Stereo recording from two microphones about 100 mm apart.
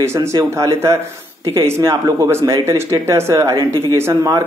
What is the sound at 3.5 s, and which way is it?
Speech, 45° right (ahead or behind).